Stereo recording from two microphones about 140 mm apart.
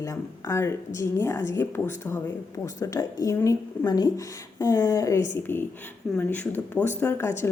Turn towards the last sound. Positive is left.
turn(degrees=15)  # may be behind; listen again after turning